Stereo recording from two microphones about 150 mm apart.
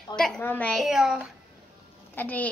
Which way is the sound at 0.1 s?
5° left (ahead or behind).